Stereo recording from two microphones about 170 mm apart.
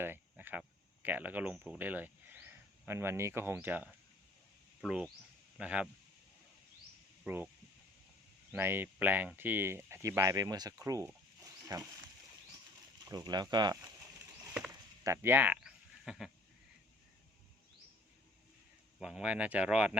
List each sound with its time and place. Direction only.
0.0 s a sound: 10° right (ahead or behind)
1.0 s speech: 10° right (ahead or behind)
4.9 s speech: 5° right (ahead or behind)
7.3 s speech: 10° right (ahead or behind)
8.5 s speech: 15° right (ahead or behind)
13.1 s speech: 25° right (ahead or behind)
15.0 s speech: 15° right (ahead or behind)
18.9 s speech: 5° right (ahead or behind)